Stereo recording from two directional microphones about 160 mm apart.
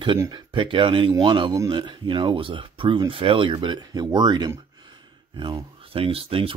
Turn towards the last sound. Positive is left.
turn(degrees=-35)  # may be behind; listen again after turning